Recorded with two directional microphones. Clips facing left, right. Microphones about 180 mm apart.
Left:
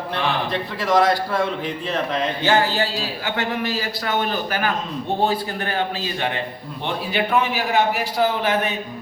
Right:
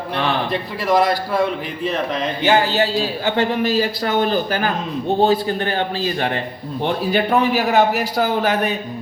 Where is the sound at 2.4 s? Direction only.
20° right (ahead or behind); by 8.7 s 40° right (ahead or behind).